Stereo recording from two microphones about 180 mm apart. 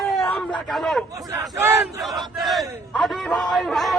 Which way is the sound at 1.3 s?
10° right (ahead or behind).